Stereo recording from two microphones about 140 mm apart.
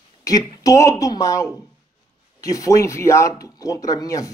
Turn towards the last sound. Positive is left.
turn(degrees=25)  # may be behind; listen again after turning